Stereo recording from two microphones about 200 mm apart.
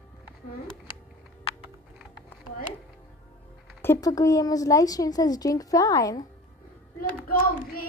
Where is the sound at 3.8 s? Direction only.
15° left (ahead or behind).